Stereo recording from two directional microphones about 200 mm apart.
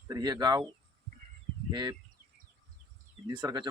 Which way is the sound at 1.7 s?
20° right (ahead or behind).